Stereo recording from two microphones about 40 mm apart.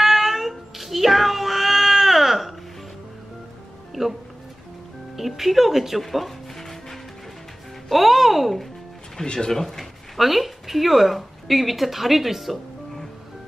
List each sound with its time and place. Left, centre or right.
0.0 s cat: centre
3.9 s music: centre
5.1 s speech: centre
9.2 s speech: centre
9.6 s speech: centre